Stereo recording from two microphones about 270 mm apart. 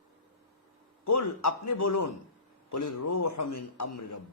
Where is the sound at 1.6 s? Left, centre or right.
Left.